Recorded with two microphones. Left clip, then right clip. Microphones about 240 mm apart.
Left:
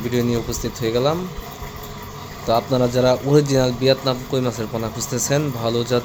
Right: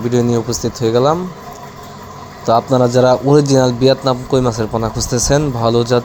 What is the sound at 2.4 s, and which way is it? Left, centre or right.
A man's voice, centre.